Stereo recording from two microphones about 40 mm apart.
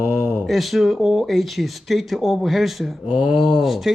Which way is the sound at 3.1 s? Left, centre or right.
Right.